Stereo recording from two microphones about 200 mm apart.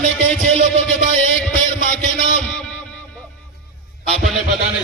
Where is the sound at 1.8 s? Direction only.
40° left (ahead or behind).